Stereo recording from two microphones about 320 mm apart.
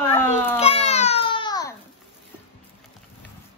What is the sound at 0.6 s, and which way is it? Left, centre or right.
Babbling, centre.